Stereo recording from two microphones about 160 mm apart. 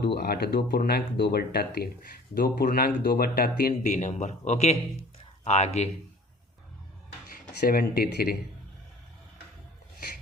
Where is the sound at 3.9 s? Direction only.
50° left (ahead or behind).